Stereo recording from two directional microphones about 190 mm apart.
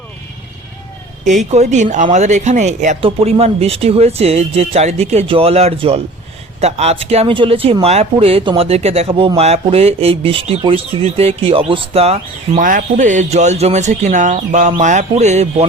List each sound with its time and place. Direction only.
1.2 s speech: 40° right (ahead or behind)